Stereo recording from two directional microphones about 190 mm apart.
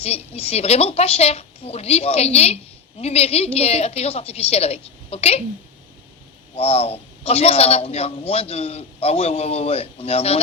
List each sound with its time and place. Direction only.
0.0 s a man's voice: 30° left (ahead or behind)
6.6 s a man's voice: 30° left (ahead or behind)